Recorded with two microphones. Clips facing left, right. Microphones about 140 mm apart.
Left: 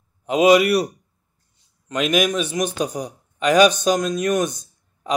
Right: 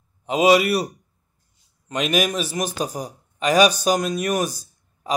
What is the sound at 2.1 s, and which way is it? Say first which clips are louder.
Speech: left 2 dB; 35° right (ahead or behind).